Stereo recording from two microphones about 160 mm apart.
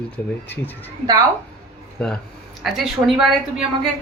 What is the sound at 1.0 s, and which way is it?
Speech, 25° right (ahead or behind).